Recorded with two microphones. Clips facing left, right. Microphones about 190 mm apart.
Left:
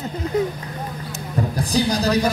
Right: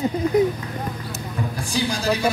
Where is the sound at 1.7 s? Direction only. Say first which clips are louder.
Left 4 dB; 35° left (ahead or behind).